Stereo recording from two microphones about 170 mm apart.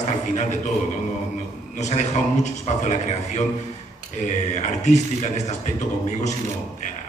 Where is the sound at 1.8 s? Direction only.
45° left (ahead or behind).